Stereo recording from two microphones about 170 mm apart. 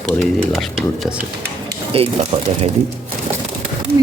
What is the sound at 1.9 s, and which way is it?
Speech, 35° right (ahead or behind).